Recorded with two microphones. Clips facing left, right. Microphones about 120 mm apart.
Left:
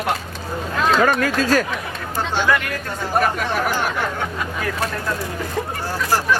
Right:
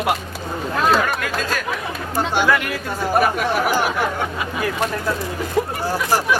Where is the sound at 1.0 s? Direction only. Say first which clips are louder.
Left 5 dB; 40° left (ahead or behind).